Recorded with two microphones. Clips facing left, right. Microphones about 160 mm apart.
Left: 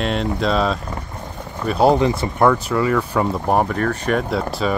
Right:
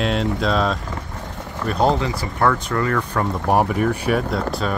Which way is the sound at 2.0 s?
20° left (ahead or behind).